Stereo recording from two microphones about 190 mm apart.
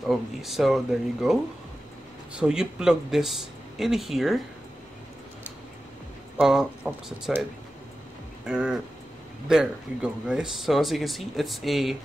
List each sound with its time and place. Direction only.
0.0 s speech: centre (ahead or behind)
6.3 s speech: 5° right (ahead or behind)
8.5 s speech: 5° right (ahead or behind)